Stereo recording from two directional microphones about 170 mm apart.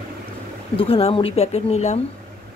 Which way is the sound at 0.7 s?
35° left (ahead or behind).